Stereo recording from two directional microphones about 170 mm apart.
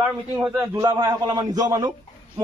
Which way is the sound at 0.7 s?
25° right (ahead or behind).